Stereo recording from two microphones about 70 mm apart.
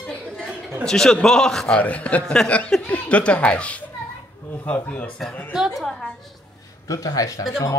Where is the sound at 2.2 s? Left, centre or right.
Centre.